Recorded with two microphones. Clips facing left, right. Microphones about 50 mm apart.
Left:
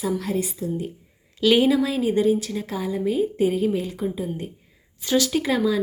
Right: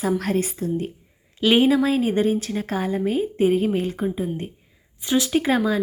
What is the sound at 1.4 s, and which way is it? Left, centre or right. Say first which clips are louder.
A woman's voice: right 1 dB; right.